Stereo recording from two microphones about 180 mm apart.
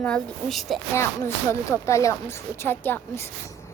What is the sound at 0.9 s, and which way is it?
Speech, 15° left (ahead or behind).